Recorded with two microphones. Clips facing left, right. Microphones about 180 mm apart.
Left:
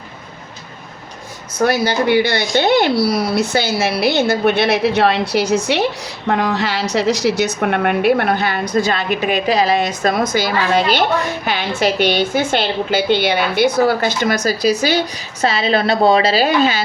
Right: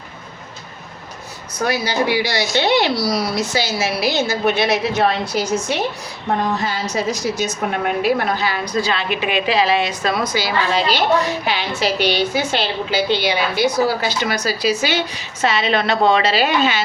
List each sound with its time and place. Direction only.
1.6 s a woman's voice: 60° left (ahead or behind); by 16.8 s 35° left (ahead or behind)